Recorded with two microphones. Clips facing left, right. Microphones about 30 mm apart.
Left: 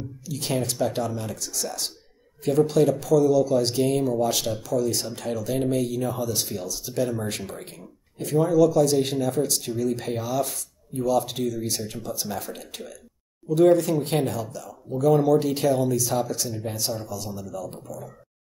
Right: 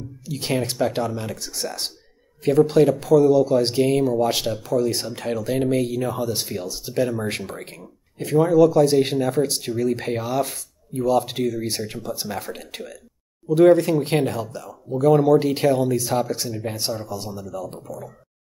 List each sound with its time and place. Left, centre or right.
0.2 s speech: right
8.5 s speech: right
15.2 s speech: right
16.4 s speech: centre
17.4 s speech: right